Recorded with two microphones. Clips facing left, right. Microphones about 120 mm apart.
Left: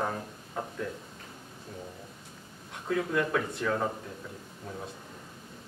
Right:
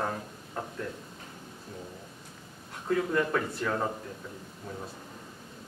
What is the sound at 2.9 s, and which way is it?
Speech, centre (ahead or behind).